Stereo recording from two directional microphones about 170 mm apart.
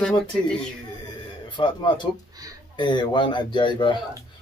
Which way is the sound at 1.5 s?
25° left (ahead or behind).